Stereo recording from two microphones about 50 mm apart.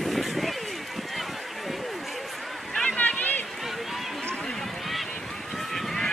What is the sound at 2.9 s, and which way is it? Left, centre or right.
Run, left.